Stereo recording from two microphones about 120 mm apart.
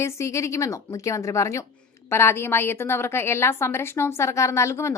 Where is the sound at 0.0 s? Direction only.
25° left (ahead or behind).